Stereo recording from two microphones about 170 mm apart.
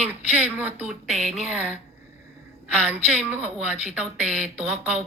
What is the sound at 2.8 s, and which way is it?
A woman's voice, 5° right (ahead or behind).